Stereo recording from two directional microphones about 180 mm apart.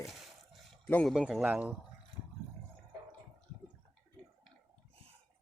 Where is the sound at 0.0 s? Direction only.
Centre (ahead or behind).